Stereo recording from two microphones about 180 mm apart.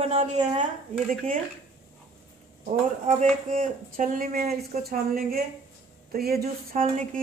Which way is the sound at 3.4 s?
50° right (ahead or behind).